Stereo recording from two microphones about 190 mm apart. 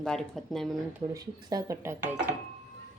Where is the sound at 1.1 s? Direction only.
20° right (ahead or behind).